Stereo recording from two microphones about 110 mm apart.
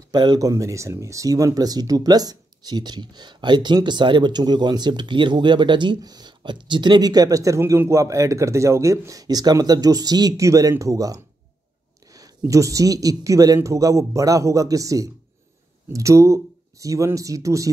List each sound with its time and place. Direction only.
0.1 s speech: 40° right (ahead or behind)